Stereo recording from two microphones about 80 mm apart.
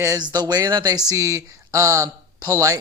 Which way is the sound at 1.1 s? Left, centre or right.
Right.